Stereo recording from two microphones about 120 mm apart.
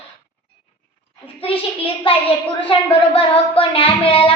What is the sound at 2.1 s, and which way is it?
A woman's voice, 50° left (ahead or behind).